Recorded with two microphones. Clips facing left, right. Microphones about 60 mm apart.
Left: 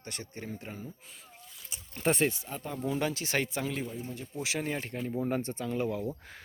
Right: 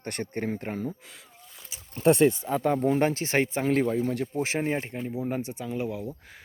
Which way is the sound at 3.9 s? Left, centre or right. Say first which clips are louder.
Right 13 dB; right.